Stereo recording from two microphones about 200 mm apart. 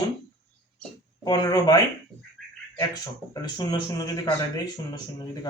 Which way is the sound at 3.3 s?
20° left (ahead or behind).